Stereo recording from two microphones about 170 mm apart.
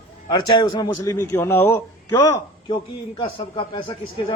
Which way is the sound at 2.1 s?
25° left (ahead or behind).